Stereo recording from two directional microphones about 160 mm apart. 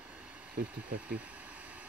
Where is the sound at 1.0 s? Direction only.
10° right (ahead or behind).